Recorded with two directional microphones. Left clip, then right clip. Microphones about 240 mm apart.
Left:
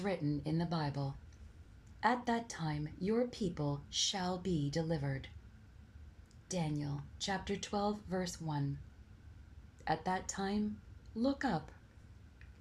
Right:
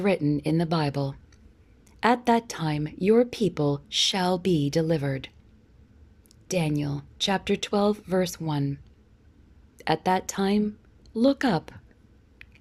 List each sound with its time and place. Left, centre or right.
0.3 s speech: right
6.5 s speech: right
9.7 s speech: right